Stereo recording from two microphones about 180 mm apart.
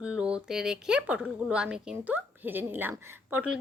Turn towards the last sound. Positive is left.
turn(degrees=-10)  # may be behind; listen again after turning